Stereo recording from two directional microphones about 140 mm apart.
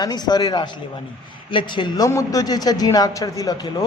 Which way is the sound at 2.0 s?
25° left (ahead or behind).